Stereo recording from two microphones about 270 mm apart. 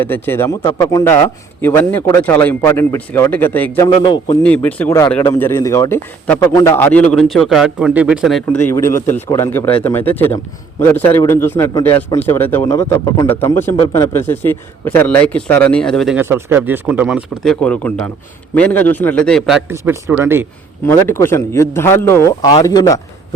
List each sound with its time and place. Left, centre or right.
0.0 s speech: centre
3.8 s speech: centre
4.4 s a man's voice: centre
20.8 s speech: centre